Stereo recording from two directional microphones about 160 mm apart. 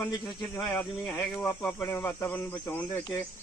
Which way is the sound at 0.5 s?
15° left (ahead or behind).